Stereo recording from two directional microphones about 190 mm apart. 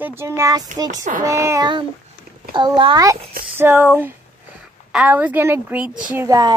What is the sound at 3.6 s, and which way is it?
A woman's voice, 10° right (ahead or behind).